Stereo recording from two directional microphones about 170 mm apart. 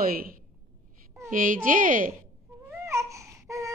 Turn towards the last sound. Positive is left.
turn(degrees=-20)  # may be behind; listen again after turning